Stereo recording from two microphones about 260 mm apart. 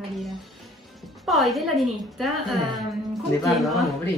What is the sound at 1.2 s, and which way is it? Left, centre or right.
A woman's voice, centre.